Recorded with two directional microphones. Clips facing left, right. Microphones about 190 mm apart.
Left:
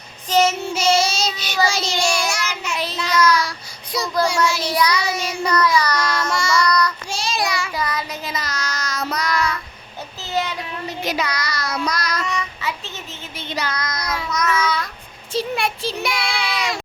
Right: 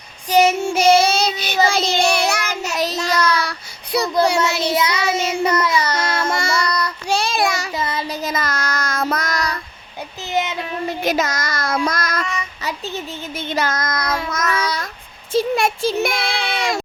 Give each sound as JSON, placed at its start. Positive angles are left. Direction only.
{"t": 0.3, "sound": "child singing", "side_deg": -15}
{"t": 0.6, "sound": "child singing", "side_deg": -55}
{"t": 3.2, "sound": "child singing", "side_deg": -60}
{"t": 4.6, "sound": "child singing", "side_deg": -25}
{"t": 6.1, "sound": "child singing", "side_deg": -55}
{"t": 6.6, "sound": "child singing", "side_deg": -25}
{"t": 7.1, "sound": "child singing", "side_deg": -60}
{"t": 7.8, "sound": "child singing", "side_deg": -25}
{"t": 8.2, "sound": "child singing", "side_deg": -50}
{"t": 10.2, "sound": "child singing", "side_deg": -20}
{"t": 10.8, "sound": "child singing", "side_deg": -50}
{"t": 13.3, "sound": "child singing", "side_deg": -50}
{"t": 16.3, "sound": "child singing", "side_deg": -25}